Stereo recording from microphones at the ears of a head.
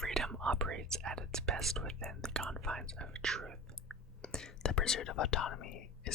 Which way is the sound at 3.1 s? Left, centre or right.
Right.